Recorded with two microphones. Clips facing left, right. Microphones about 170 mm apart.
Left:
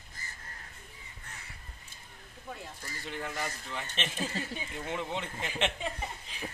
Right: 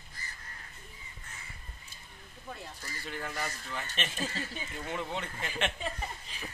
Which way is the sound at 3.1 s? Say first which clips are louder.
Left 1 dB; 20° left (ahead or behind).